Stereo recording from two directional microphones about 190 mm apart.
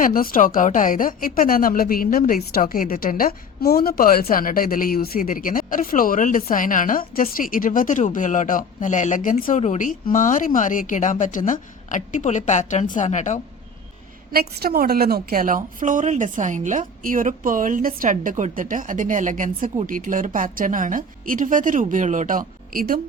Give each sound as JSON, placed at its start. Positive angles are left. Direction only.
{"t": 0.0, "sound": "speech", "side_deg": 50}
{"t": 14.3, "sound": "a woman's voice", "side_deg": -55}